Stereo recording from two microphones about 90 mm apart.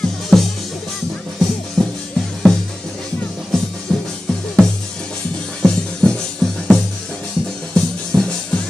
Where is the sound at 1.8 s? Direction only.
5° left (ahead or behind).